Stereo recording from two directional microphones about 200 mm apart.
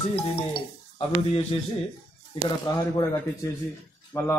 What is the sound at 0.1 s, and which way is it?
Speech, 25° left (ahead or behind).